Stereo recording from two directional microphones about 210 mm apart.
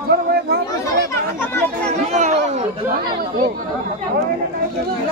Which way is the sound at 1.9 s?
35° right (ahead or behind).